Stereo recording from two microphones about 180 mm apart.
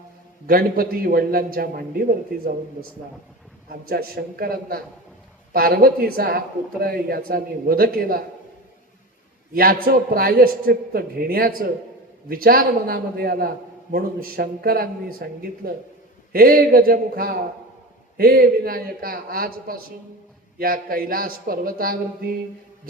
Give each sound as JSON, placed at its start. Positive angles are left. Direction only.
{"t": 0.4, "sound": "speech", "side_deg": -55}
{"t": 3.7, "sound": "speech", "side_deg": -55}
{"t": 9.5, "sound": "speech", "side_deg": -55}